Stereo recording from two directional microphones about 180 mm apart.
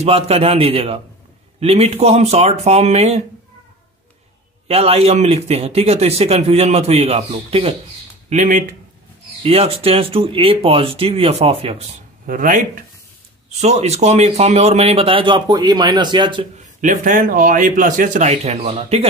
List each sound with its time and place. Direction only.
0.0 s speech: 35° right (ahead or behind)
4.6 s speech: 35° right (ahead or behind)
8.3 s speech: 45° right (ahead or behind)
9.4 s speech: 35° right (ahead or behind)
12.3 s speech: 50° right (ahead or behind)
13.6 s speech: 35° right (ahead or behind)
16.8 s speech: 45° right (ahead or behind)